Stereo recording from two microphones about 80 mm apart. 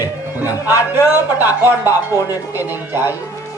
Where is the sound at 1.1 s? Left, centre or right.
Right.